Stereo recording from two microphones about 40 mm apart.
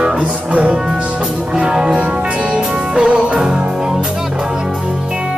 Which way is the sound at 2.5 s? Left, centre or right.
Right.